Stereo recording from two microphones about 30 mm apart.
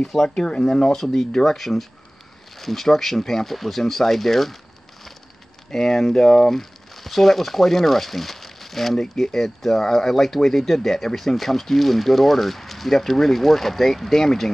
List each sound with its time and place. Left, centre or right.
0.3 s speech: left
0.9 s speech: centre
5.7 s speech: centre